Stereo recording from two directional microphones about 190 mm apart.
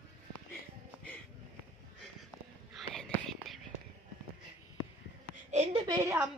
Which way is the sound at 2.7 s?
Centre (ahead or behind).